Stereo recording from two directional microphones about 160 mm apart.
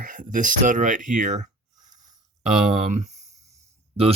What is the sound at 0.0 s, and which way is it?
Speech, 55° right (ahead or behind).